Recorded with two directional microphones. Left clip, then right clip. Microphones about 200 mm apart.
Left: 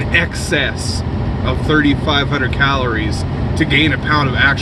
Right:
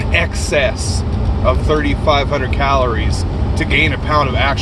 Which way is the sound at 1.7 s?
25° left (ahead or behind).